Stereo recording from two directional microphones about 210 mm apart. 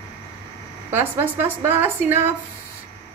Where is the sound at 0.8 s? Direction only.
10° right (ahead or behind).